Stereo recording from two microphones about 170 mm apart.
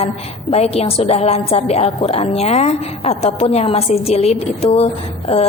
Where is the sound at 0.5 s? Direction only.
35° left (ahead or behind).